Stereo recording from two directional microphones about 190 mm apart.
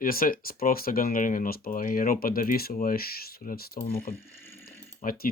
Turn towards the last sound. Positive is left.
turn(degrees=45)  # may be behind; listen again after turning